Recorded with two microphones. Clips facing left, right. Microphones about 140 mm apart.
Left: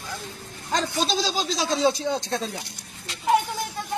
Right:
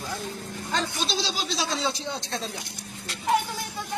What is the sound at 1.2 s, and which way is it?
Speech, 45° left (ahead or behind).